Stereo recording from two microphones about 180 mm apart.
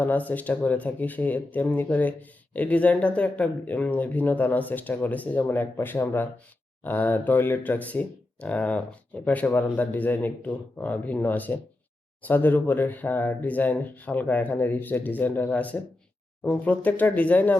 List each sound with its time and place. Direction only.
0.0 s speech: 10° left (ahead or behind)